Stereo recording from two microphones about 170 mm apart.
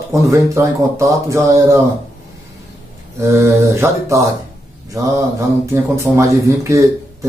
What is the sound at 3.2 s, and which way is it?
Speech, 15° right (ahead or behind).